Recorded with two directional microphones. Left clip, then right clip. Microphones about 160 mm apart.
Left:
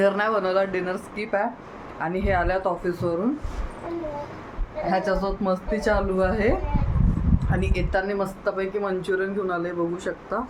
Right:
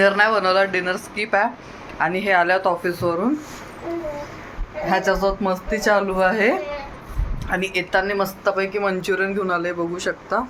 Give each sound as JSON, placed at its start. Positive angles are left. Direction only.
{"t": 0.0, "sound": "a woman's voice", "side_deg": 5}
{"t": 4.9, "sound": "a woman's voice", "side_deg": -20}